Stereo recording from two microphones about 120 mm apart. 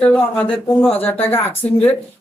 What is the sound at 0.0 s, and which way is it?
Speech, 10° left (ahead or behind).